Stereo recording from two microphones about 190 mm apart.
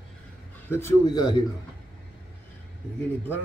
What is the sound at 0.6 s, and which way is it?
Speech, 15° left (ahead or behind).